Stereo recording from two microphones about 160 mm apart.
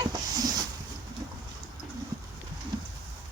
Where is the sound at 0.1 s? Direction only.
25° right (ahead or behind).